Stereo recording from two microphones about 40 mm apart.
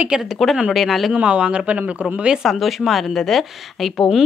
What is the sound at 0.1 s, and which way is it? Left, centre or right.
Speech, centre.